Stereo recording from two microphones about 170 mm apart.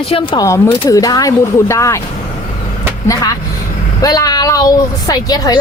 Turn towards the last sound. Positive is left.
turn(degrees=25)  # may be behind; listen again after turning